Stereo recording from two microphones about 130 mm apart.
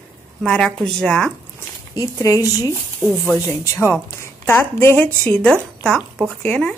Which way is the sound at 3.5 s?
20° left (ahead or behind).